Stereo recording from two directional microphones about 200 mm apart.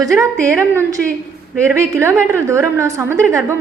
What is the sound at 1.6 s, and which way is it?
A woman's voice, 15° right (ahead or behind).